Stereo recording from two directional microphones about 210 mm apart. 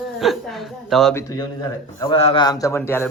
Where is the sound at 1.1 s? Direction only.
15° left (ahead or behind).